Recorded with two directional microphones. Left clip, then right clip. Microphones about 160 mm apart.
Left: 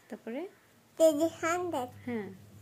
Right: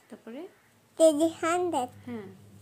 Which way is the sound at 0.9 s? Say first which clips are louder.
Right 3 dB; 20° right (ahead or behind).